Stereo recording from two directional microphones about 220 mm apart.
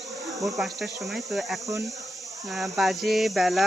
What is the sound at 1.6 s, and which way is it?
Speech, 15° right (ahead or behind).